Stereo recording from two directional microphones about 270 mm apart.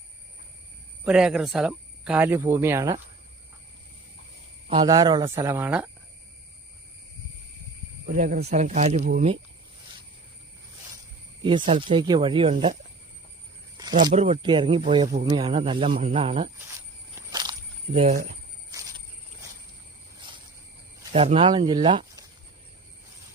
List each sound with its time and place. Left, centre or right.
1.0 s speech: centre
4.7 s speech: centre
8.0 s speech: right
11.4 s speech: centre
13.7 s cricket: centre
14.1 s speech: right
17.2 s a sound: centre
17.9 s speech: right
18.7 s a sound: centre
21.1 s speech: right